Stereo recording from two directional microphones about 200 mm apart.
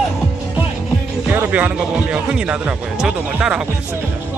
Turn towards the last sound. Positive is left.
turn(degrees=-5)  # may be behind; listen again after turning